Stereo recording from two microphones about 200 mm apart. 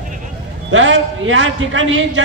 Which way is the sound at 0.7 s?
70° right (ahead or behind).